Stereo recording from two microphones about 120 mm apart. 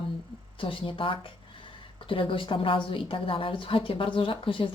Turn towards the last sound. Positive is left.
turn(degrees=45)  # may be behind; listen again after turning